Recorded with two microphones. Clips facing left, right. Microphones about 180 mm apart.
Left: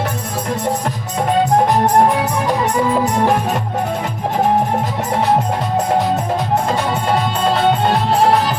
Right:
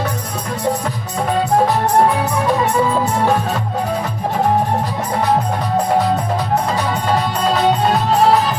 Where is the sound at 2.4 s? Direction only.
15° left (ahead or behind).